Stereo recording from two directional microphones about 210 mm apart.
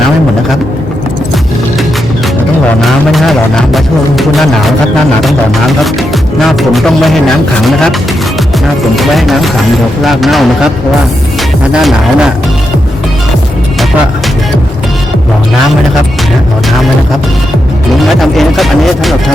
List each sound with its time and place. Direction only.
2.8 s speech: centre (ahead or behind)
5.2 s speech: centre (ahead or behind)
9.0 s speech: centre (ahead or behind)
11.7 s speech: centre (ahead or behind)
18.2 s speech: centre (ahead or behind)